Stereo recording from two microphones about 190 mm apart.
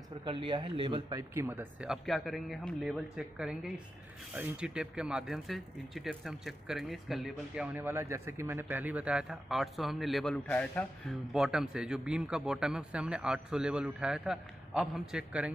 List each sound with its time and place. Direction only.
0.2 s speech: 25° right (ahead or behind)
1.3 s speech: 10° right (ahead or behind)